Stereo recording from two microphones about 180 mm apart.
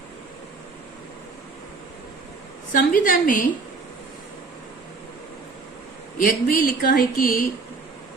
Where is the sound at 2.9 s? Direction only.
50° left (ahead or behind).